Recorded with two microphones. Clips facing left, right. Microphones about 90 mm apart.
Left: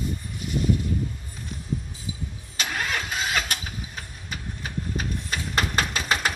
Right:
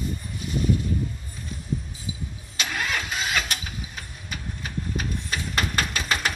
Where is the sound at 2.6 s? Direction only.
25° left (ahead or behind).